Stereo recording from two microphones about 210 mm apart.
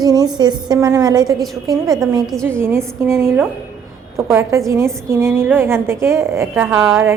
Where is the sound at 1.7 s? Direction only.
Centre (ahead or behind).